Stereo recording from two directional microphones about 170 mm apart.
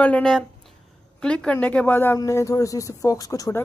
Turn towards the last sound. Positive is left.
turn(degrees=20)  # may be behind; listen again after turning